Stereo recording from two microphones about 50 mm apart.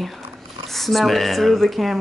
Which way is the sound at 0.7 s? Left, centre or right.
Centre.